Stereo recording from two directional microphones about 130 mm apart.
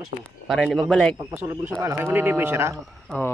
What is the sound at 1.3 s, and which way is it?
Speech, 15° right (ahead or behind).